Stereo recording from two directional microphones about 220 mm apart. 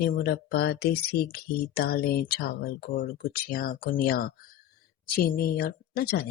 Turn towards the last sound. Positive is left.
turn(degrees=45)  # may be behind; listen again after turning